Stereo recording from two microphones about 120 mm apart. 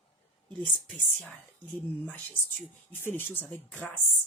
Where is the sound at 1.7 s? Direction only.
15° left (ahead or behind).